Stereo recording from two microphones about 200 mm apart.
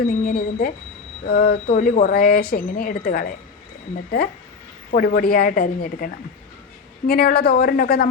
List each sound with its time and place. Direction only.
0.0 s speech: 50° left (ahead or behind)
4.9 s speech: 45° left (ahead or behind)
7.1 s speech: 50° left (ahead or behind)